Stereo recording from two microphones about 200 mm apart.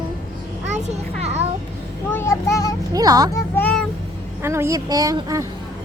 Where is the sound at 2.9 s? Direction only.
20° right (ahead or behind).